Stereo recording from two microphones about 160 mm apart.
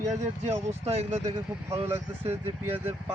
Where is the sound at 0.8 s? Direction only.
40° right (ahead or behind).